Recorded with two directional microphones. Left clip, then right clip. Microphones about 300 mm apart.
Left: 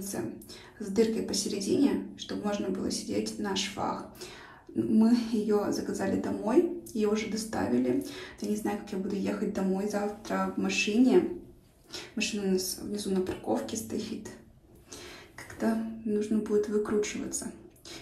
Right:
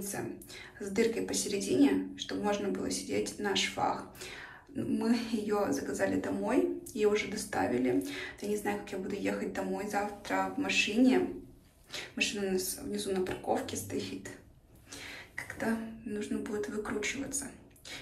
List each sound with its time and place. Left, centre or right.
0.7 s a woman's voice: centre
15.3 s speech: centre